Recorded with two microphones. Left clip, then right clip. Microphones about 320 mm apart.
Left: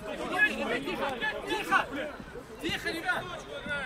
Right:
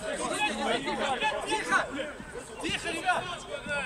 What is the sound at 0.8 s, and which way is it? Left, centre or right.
Chatter, centre.